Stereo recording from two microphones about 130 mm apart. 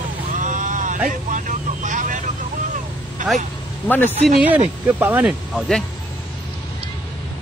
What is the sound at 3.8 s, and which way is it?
Speech, 15° left (ahead or behind).